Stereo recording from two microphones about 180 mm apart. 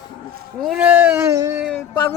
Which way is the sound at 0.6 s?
5° right (ahead or behind).